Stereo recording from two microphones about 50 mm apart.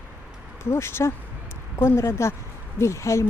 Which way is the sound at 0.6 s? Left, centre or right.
Left.